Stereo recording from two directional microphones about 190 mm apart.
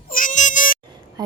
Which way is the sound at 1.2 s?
20° right (ahead or behind).